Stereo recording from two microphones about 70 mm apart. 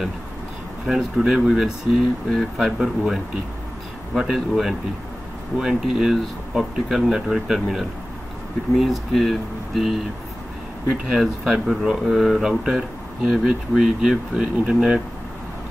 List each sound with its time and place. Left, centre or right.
0.8 s speech: centre
4.2 s speech: centre
11.1 s speech: centre